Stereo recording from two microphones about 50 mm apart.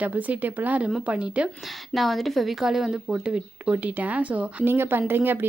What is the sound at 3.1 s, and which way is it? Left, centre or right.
Speech, centre.